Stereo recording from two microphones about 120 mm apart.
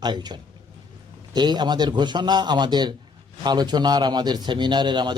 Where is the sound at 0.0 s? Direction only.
35° right (ahead or behind).